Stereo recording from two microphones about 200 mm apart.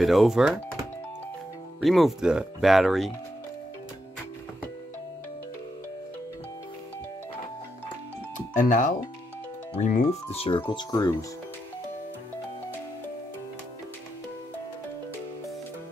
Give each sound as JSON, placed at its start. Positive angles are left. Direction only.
{"t": 0.0, "sound": "speech", "side_deg": 0}
{"t": 1.8, "sound": "speech", "side_deg": 0}
{"t": 8.5, "sound": "speech", "side_deg": 40}
{"t": 10.3, "sound": "speech", "side_deg": 30}